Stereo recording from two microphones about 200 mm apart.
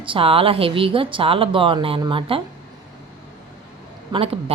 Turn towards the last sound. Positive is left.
turn(degrees=-30)  # may be behind; listen again after turning